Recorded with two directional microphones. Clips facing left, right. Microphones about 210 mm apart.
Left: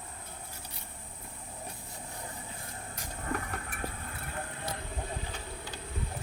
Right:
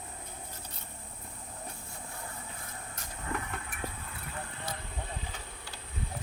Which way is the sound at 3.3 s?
40° left (ahead or behind).